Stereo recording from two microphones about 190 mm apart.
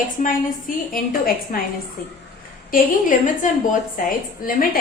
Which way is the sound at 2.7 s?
45° left (ahead or behind).